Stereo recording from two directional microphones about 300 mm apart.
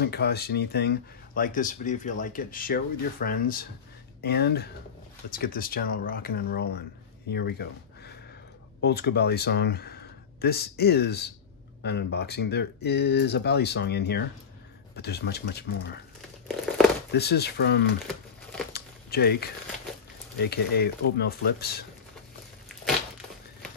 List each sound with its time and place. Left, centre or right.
0.0 s speech: left
16.4 s crumpling: centre
17.1 s speech: left
18.7 s a sound: left
20.3 s speech: left